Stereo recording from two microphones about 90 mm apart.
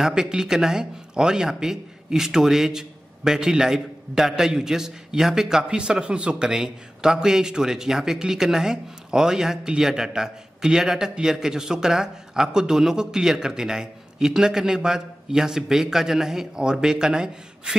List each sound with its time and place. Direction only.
0.0 s speech: 5° right (ahead or behind)